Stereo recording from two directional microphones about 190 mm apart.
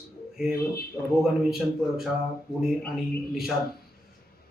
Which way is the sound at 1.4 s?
Centre (ahead or behind).